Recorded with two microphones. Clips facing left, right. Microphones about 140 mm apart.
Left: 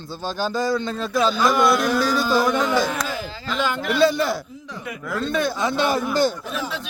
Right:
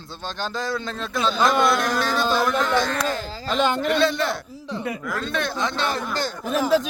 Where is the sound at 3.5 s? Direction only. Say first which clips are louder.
Right 3 dB; 25° right (ahead or behind).